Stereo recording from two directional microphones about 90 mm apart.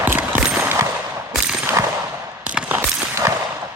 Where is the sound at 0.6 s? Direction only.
30° right (ahead or behind).